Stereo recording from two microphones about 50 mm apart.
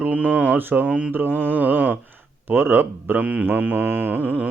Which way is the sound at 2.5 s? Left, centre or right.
Right.